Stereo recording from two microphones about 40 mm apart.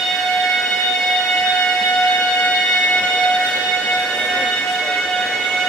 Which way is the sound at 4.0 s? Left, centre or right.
Centre.